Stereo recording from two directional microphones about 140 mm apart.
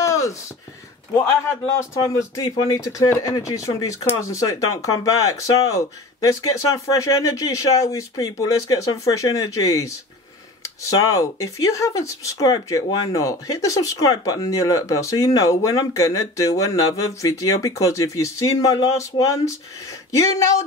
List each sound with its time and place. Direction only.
0.0 s a sound: 20° left (ahead or behind)
1.1 s speech: 20° left (ahead or behind)
11.1 s speech: 25° left (ahead or behind)